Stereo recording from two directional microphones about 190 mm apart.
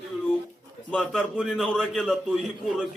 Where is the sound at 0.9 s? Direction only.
5° left (ahead or behind).